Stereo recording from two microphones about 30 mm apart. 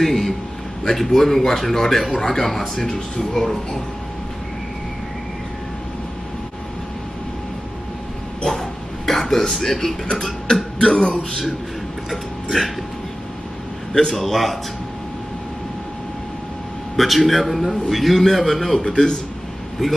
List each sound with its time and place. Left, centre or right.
0.0 s a sound: centre
0.9 s speech: centre
8.5 s a sound: centre
9.5 s speech: centre
10.8 s speech: left
12.1 s speech: centre
14.1 s a man's voice: centre
16.9 s a man's voice: centre
18.8 s a man's voice: left
19.8 s a man's voice: centre